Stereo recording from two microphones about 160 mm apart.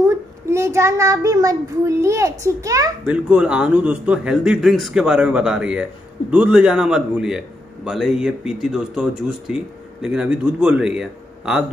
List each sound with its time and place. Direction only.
0.0 s a child's voice: 15° right (ahead or behind)
3.1 s a man's voice: 10° right (ahead or behind)